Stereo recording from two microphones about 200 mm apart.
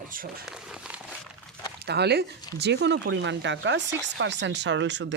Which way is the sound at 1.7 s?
55° right (ahead or behind).